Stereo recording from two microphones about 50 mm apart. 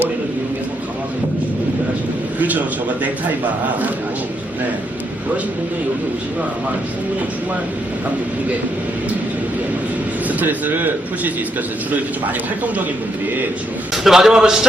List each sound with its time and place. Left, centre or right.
2.4 s a man's voice: right
10.2 s a man's voice: right
13.9 s a man's voice: centre